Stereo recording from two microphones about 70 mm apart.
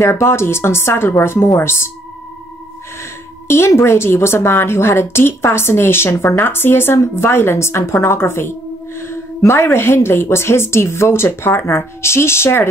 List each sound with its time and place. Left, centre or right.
0.0 s a woman's voice: left
3.4 s a woman's voice: left